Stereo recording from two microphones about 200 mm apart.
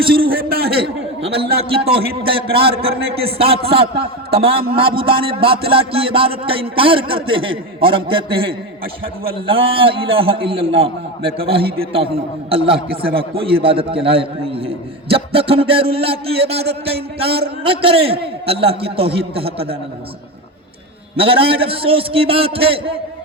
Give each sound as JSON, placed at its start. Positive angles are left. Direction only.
{"t": 0.2, "sound": "a man's voice", "side_deg": -50}
{"t": 1.2, "sound": "a man's voice", "side_deg": -30}
{"t": 2.5, "sound": "a man's voice", "side_deg": -50}
{"t": 3.2, "sound": "a man's voice", "side_deg": -30}
{"t": 21.2, "sound": "a man's voice", "side_deg": -25}